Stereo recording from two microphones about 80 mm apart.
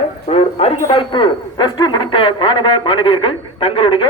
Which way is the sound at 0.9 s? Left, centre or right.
Left.